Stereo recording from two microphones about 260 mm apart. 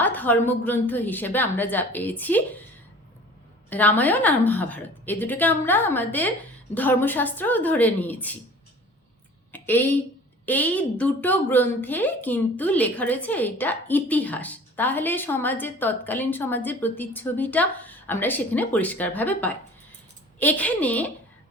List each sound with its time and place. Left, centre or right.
0.0 s a woman's voice: centre
3.7 s a woman's voice: centre
9.5 s a woman's voice: centre